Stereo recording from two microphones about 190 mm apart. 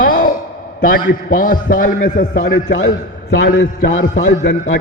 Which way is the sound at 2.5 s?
65° left (ahead or behind).